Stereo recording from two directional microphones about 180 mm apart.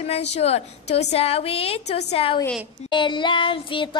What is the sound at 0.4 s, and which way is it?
A woman's voice, 35° left (ahead or behind).